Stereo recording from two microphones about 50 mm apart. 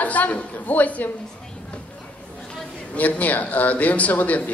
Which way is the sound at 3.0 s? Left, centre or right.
Left.